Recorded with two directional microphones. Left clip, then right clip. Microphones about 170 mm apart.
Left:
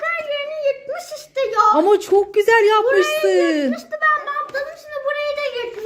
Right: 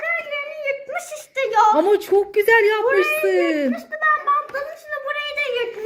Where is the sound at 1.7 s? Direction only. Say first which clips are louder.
Left 2 dB; 5° left (ahead or behind).